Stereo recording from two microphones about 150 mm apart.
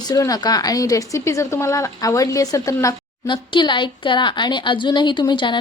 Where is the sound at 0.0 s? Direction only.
25° left (ahead or behind).